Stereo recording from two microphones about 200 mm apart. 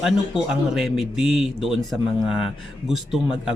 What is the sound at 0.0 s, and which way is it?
Speech, centre (ahead or behind).